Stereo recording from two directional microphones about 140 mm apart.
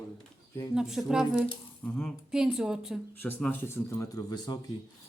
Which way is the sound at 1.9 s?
15° left (ahead or behind).